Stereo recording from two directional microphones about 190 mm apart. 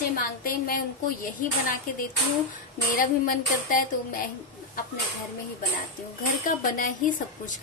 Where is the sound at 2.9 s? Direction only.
45° left (ahead or behind).